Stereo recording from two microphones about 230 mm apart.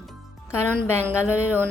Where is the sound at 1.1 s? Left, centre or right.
Centre.